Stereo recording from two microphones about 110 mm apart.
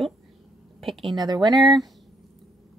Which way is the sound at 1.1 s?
40° right (ahead or behind).